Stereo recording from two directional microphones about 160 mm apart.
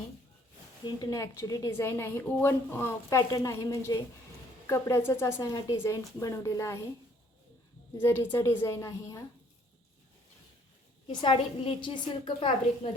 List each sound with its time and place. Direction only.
0.9 s a woman's voice: 25° left (ahead or behind)
7.9 s a woman's voice: 15° left (ahead or behind)
11.1 s a woman's voice: 30° left (ahead or behind)